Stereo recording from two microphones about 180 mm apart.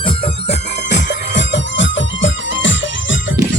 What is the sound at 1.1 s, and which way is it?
Music, 80° left.